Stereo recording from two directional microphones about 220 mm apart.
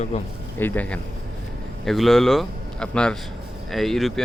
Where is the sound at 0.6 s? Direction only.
10° left (ahead or behind).